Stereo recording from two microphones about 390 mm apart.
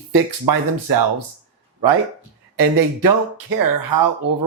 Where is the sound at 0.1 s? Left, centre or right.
Right.